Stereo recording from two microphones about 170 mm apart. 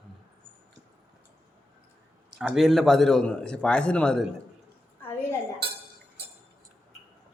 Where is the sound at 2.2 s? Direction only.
5° right (ahead or behind).